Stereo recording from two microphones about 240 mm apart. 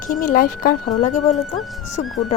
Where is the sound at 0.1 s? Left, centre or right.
Left.